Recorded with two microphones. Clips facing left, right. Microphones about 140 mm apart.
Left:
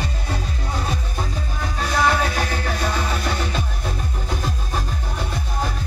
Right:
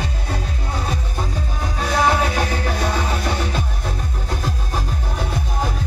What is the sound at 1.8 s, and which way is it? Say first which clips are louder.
Music: right 2 dB; 10° right (ahead or behind).